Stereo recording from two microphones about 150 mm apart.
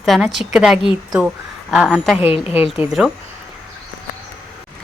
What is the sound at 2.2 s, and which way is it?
Speech, 40° left (ahead or behind).